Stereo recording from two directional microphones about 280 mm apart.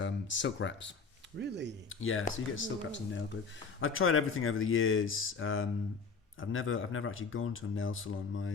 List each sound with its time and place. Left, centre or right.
0.0 s speech: left
1.4 s speech: right
1.9 s speech: left